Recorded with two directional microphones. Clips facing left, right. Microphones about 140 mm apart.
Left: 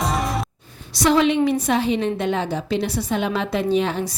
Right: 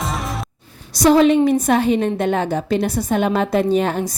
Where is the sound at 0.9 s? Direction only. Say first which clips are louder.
Right 5 dB; 40° right (ahead or behind).